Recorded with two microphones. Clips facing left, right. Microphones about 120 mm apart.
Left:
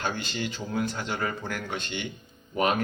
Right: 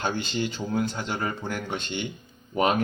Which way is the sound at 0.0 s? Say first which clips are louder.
Right 3 dB; 30° right (ahead or behind).